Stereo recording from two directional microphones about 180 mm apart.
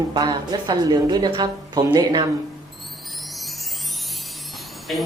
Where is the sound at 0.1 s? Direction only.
25° right (ahead or behind).